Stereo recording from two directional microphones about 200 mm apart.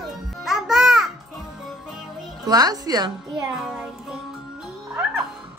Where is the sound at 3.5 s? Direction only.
5° right (ahead or behind).